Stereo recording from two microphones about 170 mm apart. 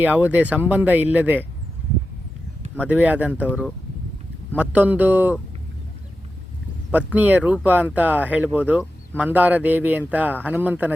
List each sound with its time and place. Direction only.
0.0 s speech: 10° right (ahead or behind)
2.8 s speech: 10° right (ahead or behind)
6.9 s speech: 10° right (ahead or behind)